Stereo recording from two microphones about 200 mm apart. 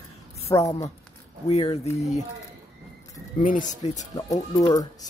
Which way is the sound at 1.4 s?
30° left (ahead or behind).